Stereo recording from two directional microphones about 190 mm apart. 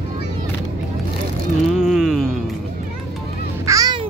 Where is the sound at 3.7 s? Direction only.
20° right (ahead or behind).